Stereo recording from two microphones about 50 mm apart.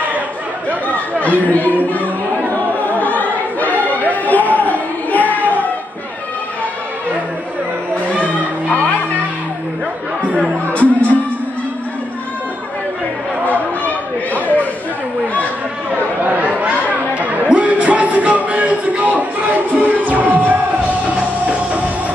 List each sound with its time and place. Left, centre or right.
1.1 s speech: left
2.5 s choir: left
4.0 s a sound: left
10.2 s music: right
10.7 s music: left
14.3 s chatter: right
15.9 s chatter: right
17.5 s music: right